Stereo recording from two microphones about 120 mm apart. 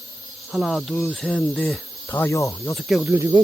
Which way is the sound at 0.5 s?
Centre (ahead or behind).